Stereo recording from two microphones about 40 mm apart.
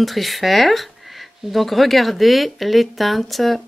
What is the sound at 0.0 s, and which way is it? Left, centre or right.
Speech, centre.